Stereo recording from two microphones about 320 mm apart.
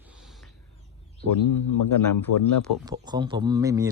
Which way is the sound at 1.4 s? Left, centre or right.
Left.